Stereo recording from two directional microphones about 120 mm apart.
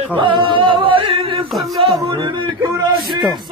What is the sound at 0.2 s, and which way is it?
Singing, 45° right (ahead or behind).